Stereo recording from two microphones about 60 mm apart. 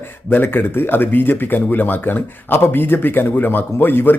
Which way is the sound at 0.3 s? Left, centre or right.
Left.